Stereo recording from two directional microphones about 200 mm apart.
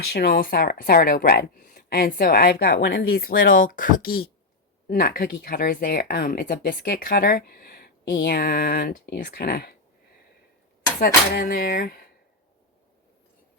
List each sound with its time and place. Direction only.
0.1 s speech: 50° left (ahead or behind)
11.0 s speech: 50° left (ahead or behind)